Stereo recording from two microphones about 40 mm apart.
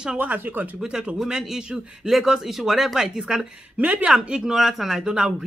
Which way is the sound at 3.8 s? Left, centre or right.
Right.